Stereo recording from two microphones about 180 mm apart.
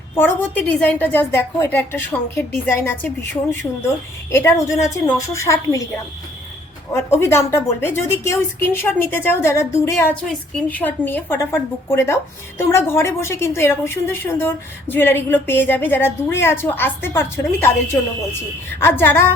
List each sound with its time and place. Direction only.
0.2 s a woman's voice: 10° left (ahead or behind)
7.1 s a woman's voice: 15° left (ahead or behind)
18.8 s a woman's voice: 15° left (ahead or behind)